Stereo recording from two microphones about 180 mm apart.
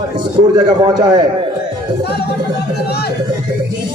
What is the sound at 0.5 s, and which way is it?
Speech, 25° right (ahead or behind).